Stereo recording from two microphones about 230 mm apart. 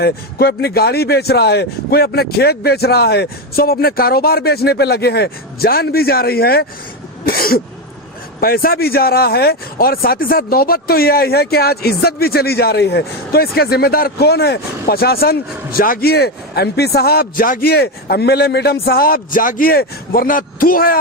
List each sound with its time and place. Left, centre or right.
0.0 s speech: left